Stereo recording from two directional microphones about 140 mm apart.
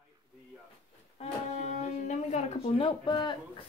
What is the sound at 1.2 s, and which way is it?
Music, 55° left (ahead or behind).